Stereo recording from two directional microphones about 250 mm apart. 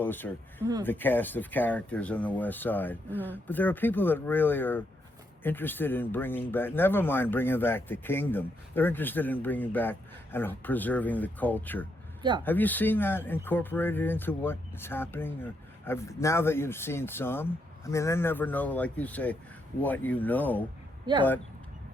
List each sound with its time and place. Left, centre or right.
0.0 s speech: centre
21.1 s speech: centre